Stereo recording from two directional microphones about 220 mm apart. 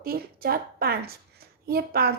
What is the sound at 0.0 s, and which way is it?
A woman's voice, 40° right (ahead or behind).